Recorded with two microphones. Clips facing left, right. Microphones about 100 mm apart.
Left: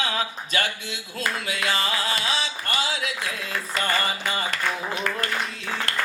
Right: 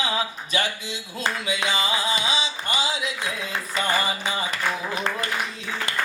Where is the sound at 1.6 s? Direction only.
Centre (ahead or behind).